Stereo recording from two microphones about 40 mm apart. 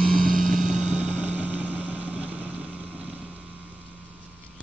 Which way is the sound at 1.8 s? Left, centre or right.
Right.